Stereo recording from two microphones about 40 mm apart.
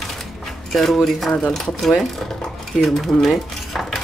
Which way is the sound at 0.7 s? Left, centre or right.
Centre.